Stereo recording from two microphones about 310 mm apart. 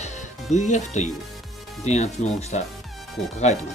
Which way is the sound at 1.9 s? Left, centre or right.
Left.